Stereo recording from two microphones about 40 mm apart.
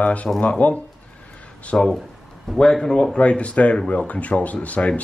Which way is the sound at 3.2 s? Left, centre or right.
Left.